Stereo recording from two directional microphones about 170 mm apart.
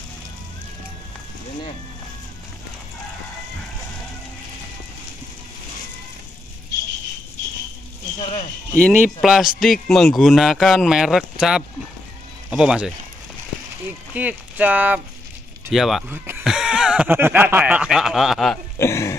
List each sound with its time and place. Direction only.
8.2 s a sound: 30° left (ahead or behind)
8.9 s speech: 5° right (ahead or behind)
14.1 s speech: 10° right (ahead or behind)
16.1 s speech: 15° right (ahead or behind)
16.4 s snicker: 5° right (ahead or behind)
18.8 s speech: 15° left (ahead or behind)